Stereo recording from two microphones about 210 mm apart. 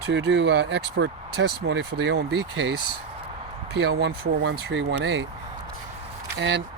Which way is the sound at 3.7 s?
55° right (ahead or behind).